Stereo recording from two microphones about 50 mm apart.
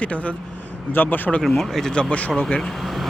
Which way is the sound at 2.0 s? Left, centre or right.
Left.